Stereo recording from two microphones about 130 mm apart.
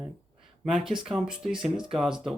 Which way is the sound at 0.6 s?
5° right (ahead or behind).